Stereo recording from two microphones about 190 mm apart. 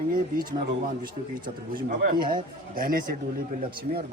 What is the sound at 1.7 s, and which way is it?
Speech, 50° right (ahead or behind).